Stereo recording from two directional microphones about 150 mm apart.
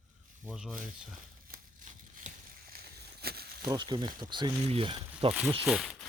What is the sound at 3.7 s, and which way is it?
Speech, 30° right (ahead or behind).